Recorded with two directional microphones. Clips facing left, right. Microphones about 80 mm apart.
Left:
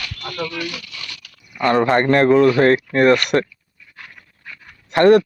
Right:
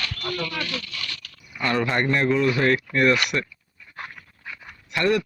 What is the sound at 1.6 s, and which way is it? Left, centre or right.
A man's voice, left.